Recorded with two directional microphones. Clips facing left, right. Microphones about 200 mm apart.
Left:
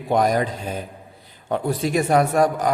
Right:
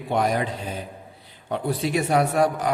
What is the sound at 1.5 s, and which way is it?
A man's voice, 45° left (ahead or behind).